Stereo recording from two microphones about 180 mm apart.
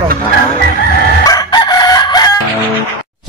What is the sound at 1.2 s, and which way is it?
Chicken, 20° left (ahead or behind).